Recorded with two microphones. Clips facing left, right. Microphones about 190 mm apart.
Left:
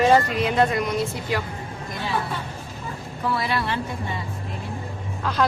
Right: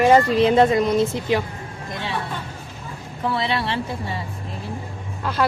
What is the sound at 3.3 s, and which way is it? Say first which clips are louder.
Speech: right 2 dB; 25° right (ahead or behind).